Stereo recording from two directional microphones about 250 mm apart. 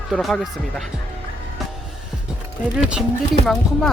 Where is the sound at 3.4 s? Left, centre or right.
Centre.